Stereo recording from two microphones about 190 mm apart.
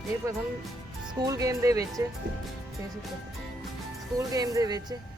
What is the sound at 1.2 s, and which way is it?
Speech, 20° right (ahead or behind).